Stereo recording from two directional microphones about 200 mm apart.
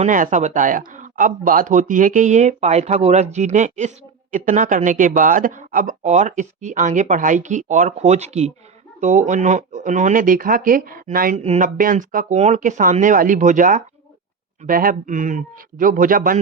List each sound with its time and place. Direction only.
0.0 s speech: 40° right (ahead or behind)